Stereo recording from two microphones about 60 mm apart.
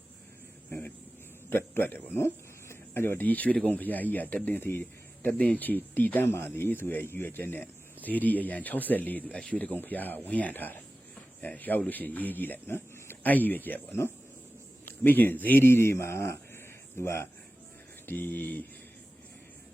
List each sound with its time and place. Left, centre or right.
0.7 s a sound: left
1.5 s speech: left
3.2 s speech: left
9.8 s speech: left
18.0 s speech: left